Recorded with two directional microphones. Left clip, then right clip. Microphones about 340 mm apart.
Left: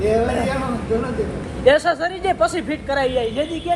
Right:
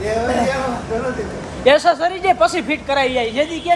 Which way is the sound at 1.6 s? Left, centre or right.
Right.